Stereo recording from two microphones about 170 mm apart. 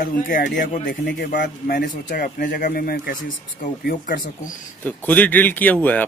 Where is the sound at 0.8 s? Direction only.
90° left.